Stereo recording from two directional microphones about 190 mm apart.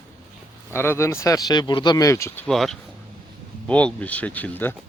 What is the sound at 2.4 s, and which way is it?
Speech, centre (ahead or behind).